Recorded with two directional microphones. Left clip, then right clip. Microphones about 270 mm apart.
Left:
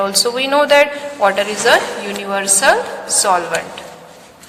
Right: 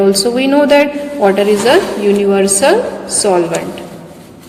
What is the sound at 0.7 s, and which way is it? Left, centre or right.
Speech, left.